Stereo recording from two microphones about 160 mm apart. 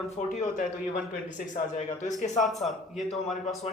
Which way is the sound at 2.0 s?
50° left (ahead or behind).